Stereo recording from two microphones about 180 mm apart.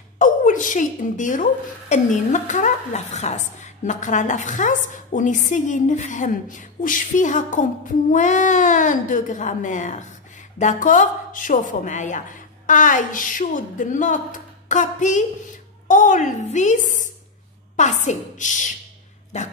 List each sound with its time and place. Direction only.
0.2 s a woman's voice: 45° left (ahead or behind)